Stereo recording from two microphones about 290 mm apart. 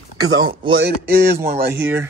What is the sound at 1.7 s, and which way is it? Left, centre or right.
Speech, centre.